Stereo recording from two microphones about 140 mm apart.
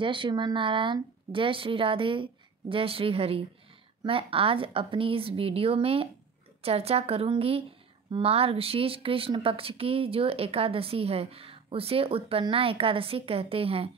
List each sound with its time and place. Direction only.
0.0 s a woman's voice: 35° right (ahead or behind)